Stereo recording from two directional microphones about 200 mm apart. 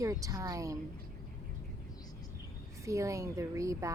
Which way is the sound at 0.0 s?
15° right (ahead or behind).